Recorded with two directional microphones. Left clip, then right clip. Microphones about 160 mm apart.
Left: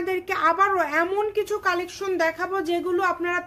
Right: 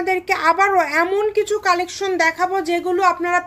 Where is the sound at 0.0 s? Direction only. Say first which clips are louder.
Right 5 dB; 25° right (ahead or behind).